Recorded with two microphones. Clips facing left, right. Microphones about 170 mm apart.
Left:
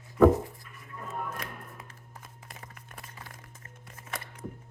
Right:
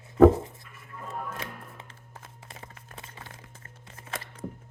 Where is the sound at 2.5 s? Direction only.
25° right (ahead or behind).